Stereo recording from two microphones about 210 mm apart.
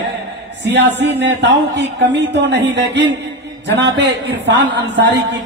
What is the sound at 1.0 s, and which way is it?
A man's voice, 55° right (ahead or behind).